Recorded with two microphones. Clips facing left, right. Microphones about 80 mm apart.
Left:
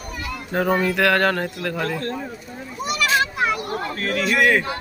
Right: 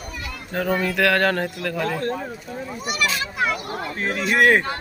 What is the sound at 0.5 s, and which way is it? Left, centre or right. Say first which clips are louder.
Speech: left 2 dB; centre.